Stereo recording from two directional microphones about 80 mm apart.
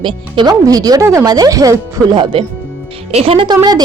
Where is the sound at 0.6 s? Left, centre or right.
Right.